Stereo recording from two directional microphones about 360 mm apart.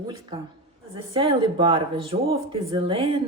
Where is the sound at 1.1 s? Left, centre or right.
Centre.